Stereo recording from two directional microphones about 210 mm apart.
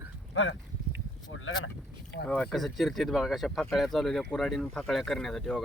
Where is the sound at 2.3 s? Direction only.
5° left (ahead or behind).